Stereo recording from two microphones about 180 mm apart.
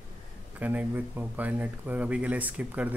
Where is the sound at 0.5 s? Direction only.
10° right (ahead or behind).